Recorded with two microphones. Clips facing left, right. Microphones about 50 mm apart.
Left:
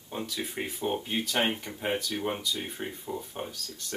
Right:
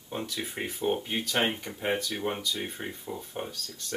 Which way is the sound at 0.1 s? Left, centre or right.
Centre.